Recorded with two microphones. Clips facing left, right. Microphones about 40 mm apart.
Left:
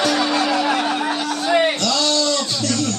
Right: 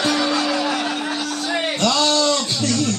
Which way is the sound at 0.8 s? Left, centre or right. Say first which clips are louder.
Left 3 dB; centre.